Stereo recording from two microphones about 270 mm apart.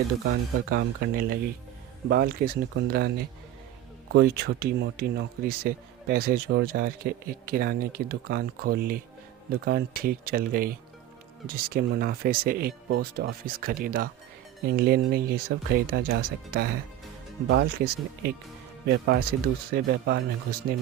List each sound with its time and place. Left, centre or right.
0.7 s speech: right
4.1 s speech: right